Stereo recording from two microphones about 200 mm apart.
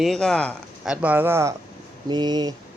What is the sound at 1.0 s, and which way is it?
Speech, 10° right (ahead or behind).